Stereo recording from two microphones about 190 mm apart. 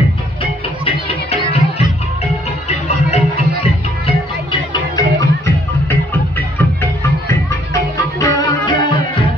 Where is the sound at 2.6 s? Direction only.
35° left (ahead or behind).